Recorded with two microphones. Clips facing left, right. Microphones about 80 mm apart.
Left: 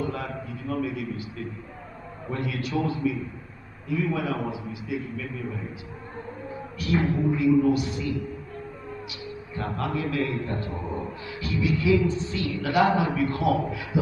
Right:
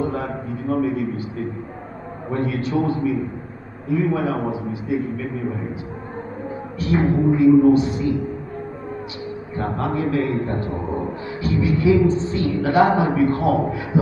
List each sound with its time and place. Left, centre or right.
0.0 s a sound: right
2.2 s a man's voice: right
6.8 s a man's voice: right
9.6 s a man's voice: right